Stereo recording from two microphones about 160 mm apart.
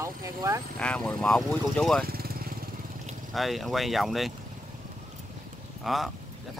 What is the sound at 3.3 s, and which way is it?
Speech, centre (ahead or behind).